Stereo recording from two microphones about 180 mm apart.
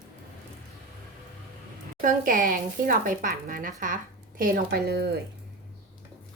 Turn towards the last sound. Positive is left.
turn(degrees=-60)  # may be behind; listen again after turning